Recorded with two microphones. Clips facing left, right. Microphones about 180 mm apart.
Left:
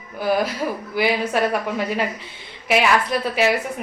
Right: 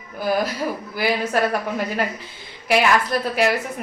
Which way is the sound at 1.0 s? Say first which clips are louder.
Left 1 dB; centre (ahead or behind).